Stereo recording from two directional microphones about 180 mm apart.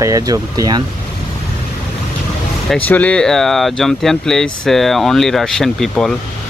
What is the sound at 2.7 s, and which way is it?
Speech, 5° left (ahead or behind).